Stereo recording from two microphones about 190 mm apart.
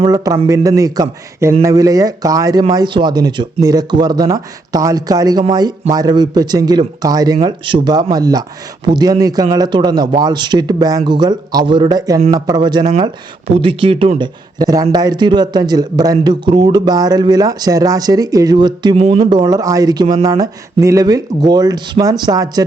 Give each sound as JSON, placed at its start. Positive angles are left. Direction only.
{"t": 0.0, "sound": "a man's voice", "side_deg": -20}